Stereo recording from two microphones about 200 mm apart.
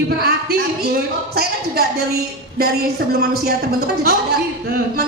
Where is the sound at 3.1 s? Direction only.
50° right (ahead or behind).